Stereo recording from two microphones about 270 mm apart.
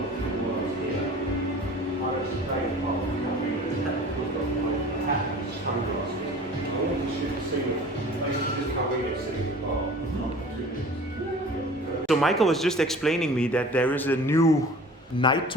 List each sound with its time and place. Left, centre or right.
12.0 s a man's voice: centre